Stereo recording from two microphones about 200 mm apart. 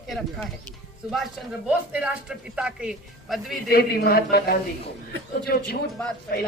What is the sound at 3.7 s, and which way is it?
A woman's voice, 50° left (ahead or behind).